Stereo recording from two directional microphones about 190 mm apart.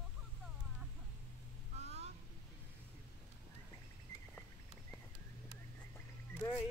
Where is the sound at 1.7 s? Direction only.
35° right (ahead or behind).